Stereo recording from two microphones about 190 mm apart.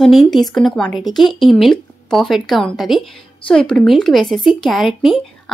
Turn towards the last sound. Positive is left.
turn(degrees=0)  # may be behind; listen again after turning